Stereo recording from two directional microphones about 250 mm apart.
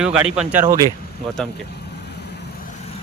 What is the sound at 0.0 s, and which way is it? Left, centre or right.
Speech, centre.